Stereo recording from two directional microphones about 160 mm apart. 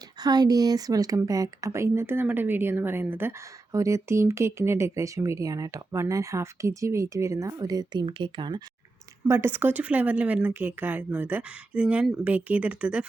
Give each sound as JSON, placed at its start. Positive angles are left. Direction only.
{"t": 0.2, "sound": "speech", "side_deg": -25}
{"t": 9.2, "sound": "speech", "side_deg": -15}